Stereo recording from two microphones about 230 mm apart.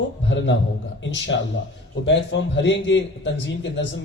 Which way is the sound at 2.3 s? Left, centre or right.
Left.